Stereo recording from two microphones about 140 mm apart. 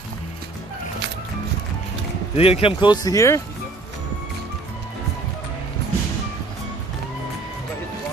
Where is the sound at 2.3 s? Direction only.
45° left (ahead or behind); by 3.4 s 20° left (ahead or behind).